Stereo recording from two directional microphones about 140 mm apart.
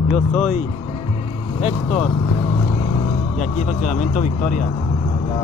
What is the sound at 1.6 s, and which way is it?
Speech, 50° left (ahead or behind).